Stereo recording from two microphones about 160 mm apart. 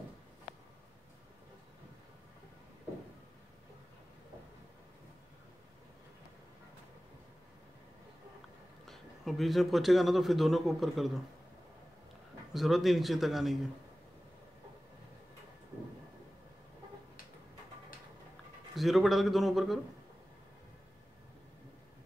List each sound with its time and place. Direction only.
8.8 s a man's voice: centre (ahead or behind)
12.5 s a man's voice: centre (ahead or behind)
18.8 s a man's voice: centre (ahead or behind)